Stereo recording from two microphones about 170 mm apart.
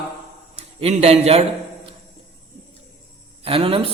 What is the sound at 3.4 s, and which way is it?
Speech, 35° right (ahead or behind).